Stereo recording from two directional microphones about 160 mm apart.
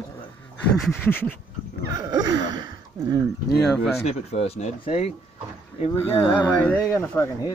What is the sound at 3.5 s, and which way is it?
Speech, centre (ahead or behind).